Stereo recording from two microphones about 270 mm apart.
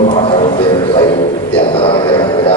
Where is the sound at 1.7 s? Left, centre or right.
Centre.